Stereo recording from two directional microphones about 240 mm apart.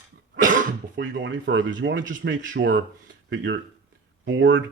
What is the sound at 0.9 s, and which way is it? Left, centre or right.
Speech, right.